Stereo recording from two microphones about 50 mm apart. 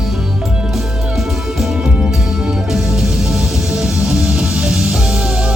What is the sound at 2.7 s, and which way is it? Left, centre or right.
Music, centre.